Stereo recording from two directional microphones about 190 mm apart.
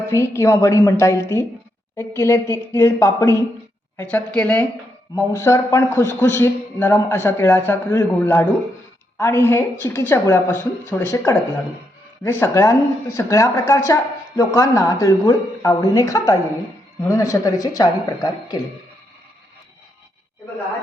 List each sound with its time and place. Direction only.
0.0 s a man's voice: 15° left (ahead or behind)